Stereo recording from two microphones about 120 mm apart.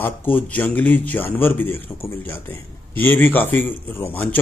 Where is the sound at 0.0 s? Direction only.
15° left (ahead or behind).